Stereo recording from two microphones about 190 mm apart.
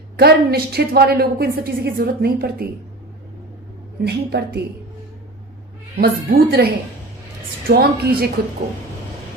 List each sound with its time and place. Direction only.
0.2 s a woman's voice: 55° right (ahead or behind)
4.0 s a woman's voice: 60° right (ahead or behind)
6.0 s a woman's voice: 55° right (ahead or behind)
7.7 s a woman's voice: 55° right (ahead or behind)